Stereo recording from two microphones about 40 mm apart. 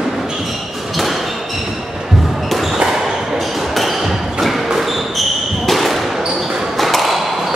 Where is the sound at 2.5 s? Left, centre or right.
Centre.